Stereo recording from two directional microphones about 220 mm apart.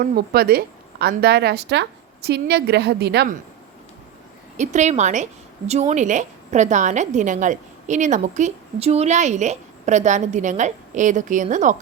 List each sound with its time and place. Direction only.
0.0 s speech: 40° right (ahead or behind)
4.5 s a woman's voice: 35° right (ahead or behind)